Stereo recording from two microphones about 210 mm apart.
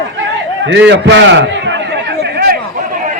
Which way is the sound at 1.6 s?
55° right (ahead or behind).